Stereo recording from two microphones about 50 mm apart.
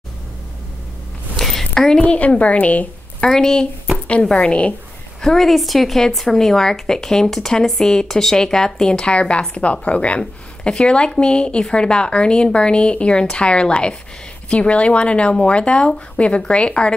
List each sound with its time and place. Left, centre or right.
1.3 s a sound: centre
2.1 s speech: left
3.3 s a woman's voice: centre
5.2 s a woman's voice: centre; by 16.9 s left